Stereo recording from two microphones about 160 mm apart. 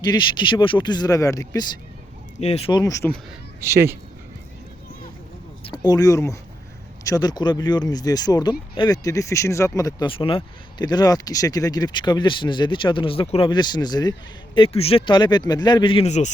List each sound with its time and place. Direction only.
0.0 s speech: 30° left (ahead or behind)
2.4 s speech: 45° left (ahead or behind)
2.7 s speech: 20° left (ahead or behind)
3.6 s speech: 15° right (ahead or behind)
5.6 s speech: 25° left (ahead or behind)
10.1 s speech: 35° left (ahead or behind)